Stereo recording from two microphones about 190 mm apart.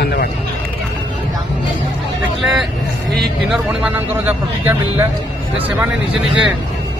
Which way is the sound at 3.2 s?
5° right (ahead or behind).